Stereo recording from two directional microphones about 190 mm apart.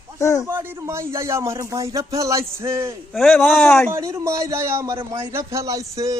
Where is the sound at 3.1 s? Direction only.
5° left (ahead or behind).